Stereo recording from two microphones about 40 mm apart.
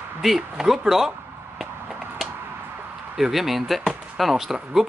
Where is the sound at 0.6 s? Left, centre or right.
Centre.